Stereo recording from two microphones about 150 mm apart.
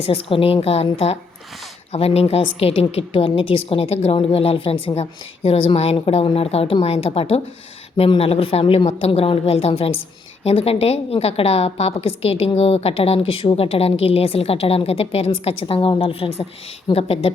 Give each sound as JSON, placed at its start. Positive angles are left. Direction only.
{"t": 0.0, "sound": "a woman's voice", "side_deg": 40}